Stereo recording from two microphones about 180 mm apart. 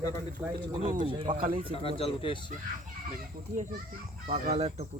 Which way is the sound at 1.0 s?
30° right (ahead or behind).